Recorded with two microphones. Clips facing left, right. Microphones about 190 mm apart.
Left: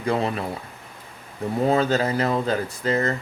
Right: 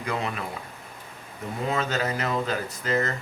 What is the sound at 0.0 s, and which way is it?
Speech, 35° left (ahead or behind).